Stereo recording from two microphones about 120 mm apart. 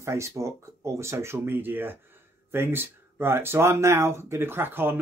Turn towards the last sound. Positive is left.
turn(degrees=-20)  # may be behind; listen again after turning